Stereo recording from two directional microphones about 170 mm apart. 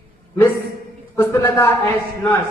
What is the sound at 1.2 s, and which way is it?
Speech, 15° left (ahead or behind).